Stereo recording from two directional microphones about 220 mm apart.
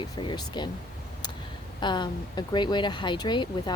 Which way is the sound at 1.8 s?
20° left (ahead or behind).